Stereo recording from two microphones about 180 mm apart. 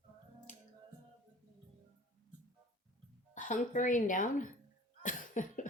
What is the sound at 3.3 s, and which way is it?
Speech, 45° left (ahead or behind).